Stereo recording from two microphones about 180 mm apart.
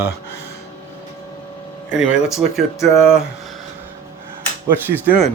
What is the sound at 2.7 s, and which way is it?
Speech, 15° left (ahead or behind).